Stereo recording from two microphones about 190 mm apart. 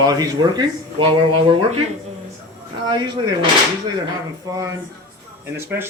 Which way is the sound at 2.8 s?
20° right (ahead or behind).